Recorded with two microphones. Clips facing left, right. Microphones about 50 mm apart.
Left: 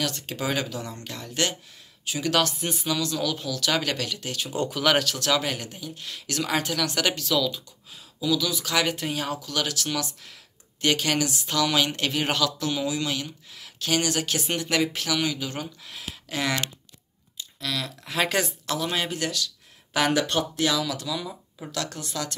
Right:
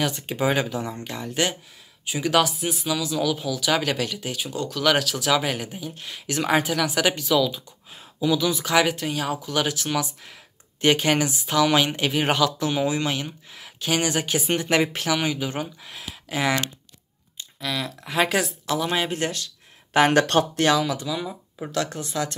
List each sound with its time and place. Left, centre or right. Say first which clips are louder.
0.0 s speech: right 5 dB; centre
6.6 s speech: right 3 dB; centre
7.9 s speech: right 3 dB; right
8.8 s speech: right 3 dB; centre
9.4 s speech: right 4 dB; right
19.0 s speech: right 2 dB; right
20.1 s speech: right 5 dB; right
20.7 s speech: right 4 dB; right